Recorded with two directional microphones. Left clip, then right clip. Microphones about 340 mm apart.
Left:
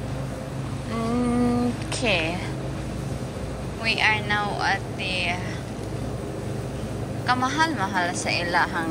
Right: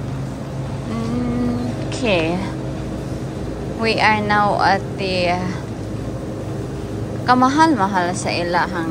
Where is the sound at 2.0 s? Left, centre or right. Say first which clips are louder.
Right 5 dB; centre.